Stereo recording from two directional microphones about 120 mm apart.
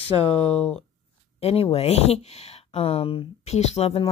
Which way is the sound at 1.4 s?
55° left (ahead or behind).